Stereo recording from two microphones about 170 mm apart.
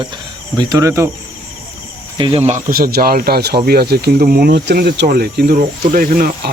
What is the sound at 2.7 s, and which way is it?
Speech, 60° right (ahead or behind).